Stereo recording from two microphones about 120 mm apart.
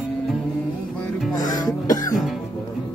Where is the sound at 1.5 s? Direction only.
30° left (ahead or behind).